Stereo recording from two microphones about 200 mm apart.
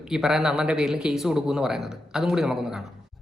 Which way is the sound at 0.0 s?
Centre (ahead or behind).